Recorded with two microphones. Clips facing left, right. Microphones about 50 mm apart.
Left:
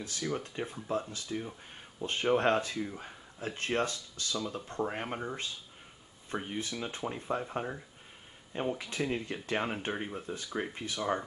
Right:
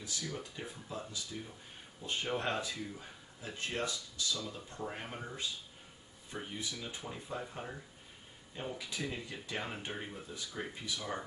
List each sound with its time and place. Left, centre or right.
0.0 s speech: left